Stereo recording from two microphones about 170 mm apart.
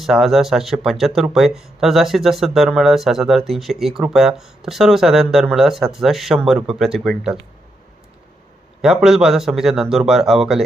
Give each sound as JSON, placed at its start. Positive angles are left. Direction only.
{"t": 0.0, "sound": "speech", "side_deg": 0}
{"t": 8.8, "sound": "speech", "side_deg": -5}